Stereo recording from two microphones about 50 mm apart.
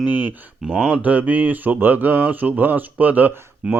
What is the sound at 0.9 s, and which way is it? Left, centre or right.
Speech, right.